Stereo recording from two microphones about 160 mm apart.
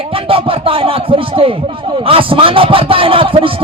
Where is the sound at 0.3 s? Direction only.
35° right (ahead or behind).